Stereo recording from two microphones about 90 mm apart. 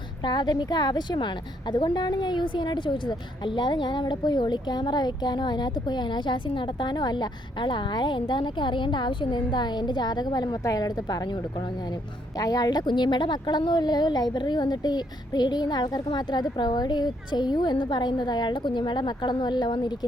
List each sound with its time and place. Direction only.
0.3 s a woman's voice: 55° left (ahead or behind)
12.4 s a woman's voice: 45° left (ahead or behind)